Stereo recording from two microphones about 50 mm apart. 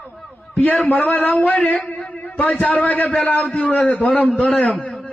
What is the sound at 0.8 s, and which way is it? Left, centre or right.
Speech, left.